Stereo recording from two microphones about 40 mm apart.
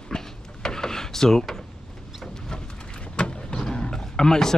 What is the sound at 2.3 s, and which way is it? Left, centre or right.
Vehicle, centre.